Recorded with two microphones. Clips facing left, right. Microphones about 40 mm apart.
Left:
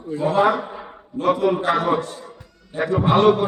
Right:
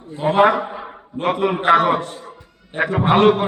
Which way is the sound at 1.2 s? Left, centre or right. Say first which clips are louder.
Even; right.